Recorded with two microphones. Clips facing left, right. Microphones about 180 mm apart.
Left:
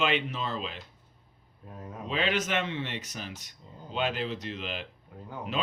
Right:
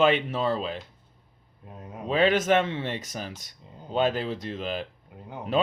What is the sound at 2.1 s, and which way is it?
Speech, 45° right (ahead or behind).